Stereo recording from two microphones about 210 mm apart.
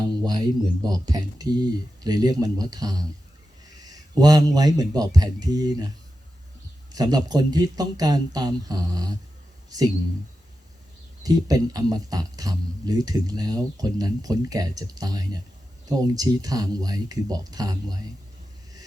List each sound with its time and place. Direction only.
0.0 s speech: 20° right (ahead or behind)
6.9 s speech: 20° right (ahead or behind)
11.2 s speech: 15° right (ahead or behind)